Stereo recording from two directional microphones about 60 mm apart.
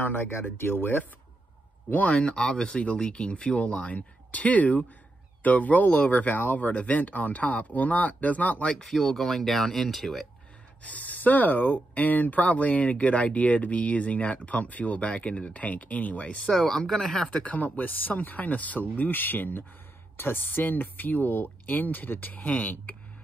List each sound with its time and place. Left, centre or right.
0.0 s speech: left
2.1 s speech: centre
8.8 s speech: centre
10.8 s speech: left
16.6 s speech: centre
17.4 s speech: left